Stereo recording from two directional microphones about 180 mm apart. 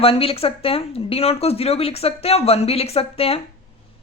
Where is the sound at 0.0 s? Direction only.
30° left (ahead or behind).